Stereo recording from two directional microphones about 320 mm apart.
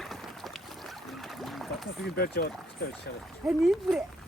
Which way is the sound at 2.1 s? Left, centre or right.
Left.